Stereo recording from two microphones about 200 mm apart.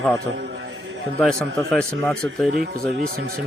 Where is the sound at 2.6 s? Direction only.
55° right (ahead or behind).